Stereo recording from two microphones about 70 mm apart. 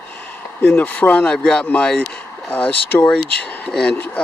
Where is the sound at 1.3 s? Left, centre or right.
Centre.